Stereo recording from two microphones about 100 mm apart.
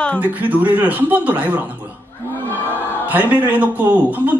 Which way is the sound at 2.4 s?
20° left (ahead or behind).